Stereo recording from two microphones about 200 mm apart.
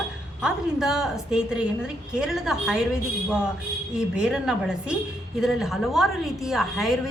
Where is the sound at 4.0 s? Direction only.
5° right (ahead or behind).